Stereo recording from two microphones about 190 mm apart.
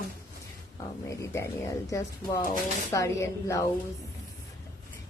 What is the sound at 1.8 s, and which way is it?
A woman's voice, 15° left (ahead or behind).